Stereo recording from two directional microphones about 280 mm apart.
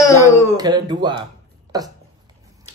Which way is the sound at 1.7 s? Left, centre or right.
Centre.